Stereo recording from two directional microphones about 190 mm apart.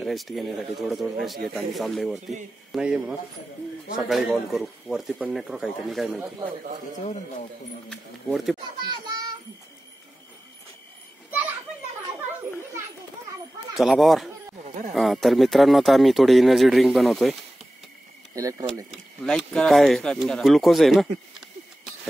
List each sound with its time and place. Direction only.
0.0 s speech: centre (ahead or behind)
7.9 s speech: centre (ahead or behind)
13.7 s speech: centre (ahead or behind)
18.3 s speech: 15° right (ahead or behind)
19.2 s speech: 5° left (ahead or behind)